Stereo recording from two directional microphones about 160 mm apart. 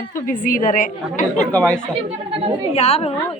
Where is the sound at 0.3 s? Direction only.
55° left (ahead or behind).